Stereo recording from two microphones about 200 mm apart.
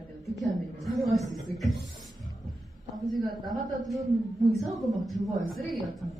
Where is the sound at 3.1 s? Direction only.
Centre (ahead or behind).